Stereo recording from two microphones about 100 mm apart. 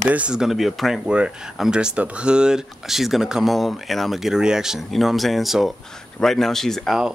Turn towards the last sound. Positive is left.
turn(degrees=5)  # may be behind; listen again after turning